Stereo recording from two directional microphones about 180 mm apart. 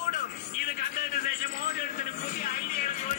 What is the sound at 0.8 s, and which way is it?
Vehicle, 50° left (ahead or behind).